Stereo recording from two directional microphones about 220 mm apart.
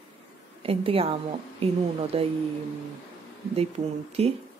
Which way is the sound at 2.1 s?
25° right (ahead or behind).